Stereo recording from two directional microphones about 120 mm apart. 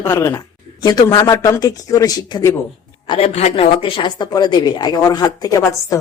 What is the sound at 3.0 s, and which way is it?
Speech, 45° left (ahead or behind).